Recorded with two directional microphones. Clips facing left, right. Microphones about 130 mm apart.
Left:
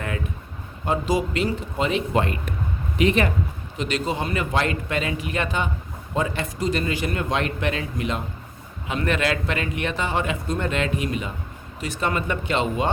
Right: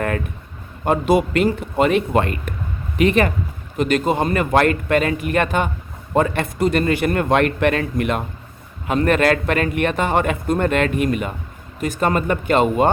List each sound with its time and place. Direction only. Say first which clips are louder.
0.9 s a man's voice: right 6 dB; 60° right (ahead or behind)